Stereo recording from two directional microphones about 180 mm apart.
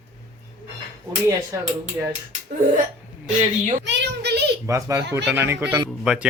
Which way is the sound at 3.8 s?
75° right (ahead or behind).